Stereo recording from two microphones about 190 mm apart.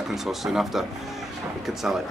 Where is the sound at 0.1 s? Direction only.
Centre (ahead or behind).